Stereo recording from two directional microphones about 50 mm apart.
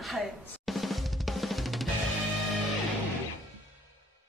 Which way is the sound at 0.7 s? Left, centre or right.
Centre.